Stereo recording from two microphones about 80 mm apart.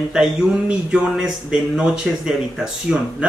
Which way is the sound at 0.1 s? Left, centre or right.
Centre.